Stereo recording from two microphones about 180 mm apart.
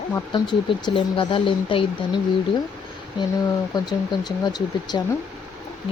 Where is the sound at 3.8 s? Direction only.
25° left (ahead or behind).